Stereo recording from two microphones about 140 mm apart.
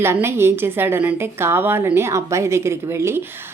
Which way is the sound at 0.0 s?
20° right (ahead or behind).